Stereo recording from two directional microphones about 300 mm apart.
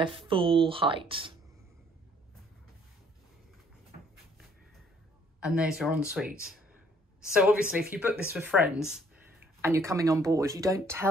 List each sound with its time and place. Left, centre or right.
0.0 s speech: centre
5.4 s speech: centre
7.3 s speech: centre